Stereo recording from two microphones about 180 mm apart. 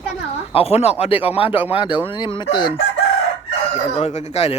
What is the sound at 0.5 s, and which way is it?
Speech, 35° left (ahead or behind).